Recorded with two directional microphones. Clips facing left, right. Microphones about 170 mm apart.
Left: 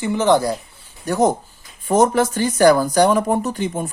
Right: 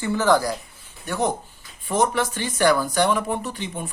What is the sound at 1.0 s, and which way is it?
Speech, 40° left (ahead or behind).